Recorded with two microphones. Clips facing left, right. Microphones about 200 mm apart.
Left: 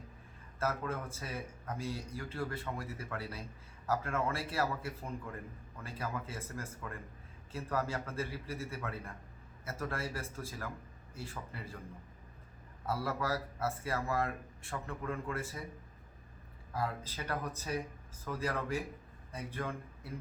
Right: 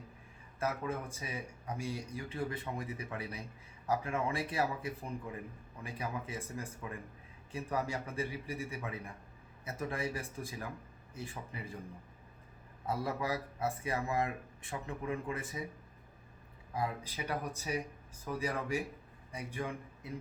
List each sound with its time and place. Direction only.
0.6 s speech: 15° right (ahead or behind)
12.8 s speech: 15° right (ahead or behind)
16.7 s speech: 15° right (ahead or behind)